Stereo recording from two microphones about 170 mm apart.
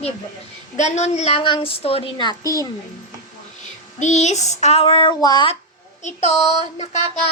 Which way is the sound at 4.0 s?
45° left (ahead or behind).